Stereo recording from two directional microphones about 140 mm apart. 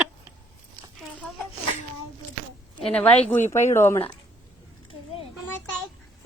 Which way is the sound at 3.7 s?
20° left (ahead or behind).